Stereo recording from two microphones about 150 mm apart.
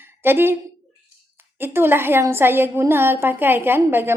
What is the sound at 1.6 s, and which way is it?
A woman's voice, 15° right (ahead or behind).